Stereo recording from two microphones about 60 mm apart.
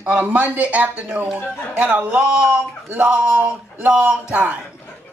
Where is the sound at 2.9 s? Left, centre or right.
Right.